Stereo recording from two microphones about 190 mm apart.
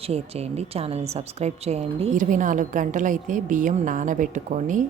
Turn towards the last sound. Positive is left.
turn(degrees=-40)  # may be behind; listen again after turning